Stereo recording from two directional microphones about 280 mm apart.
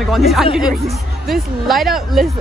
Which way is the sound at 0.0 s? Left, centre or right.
Centre.